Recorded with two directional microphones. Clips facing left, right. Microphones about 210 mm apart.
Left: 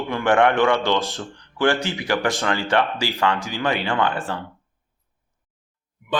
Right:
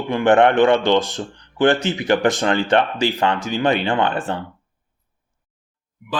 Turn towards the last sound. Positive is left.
turn(degrees=-25)  # may be behind; listen again after turning